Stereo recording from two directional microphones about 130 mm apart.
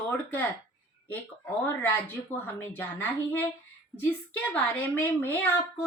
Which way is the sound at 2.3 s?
15° left (ahead or behind).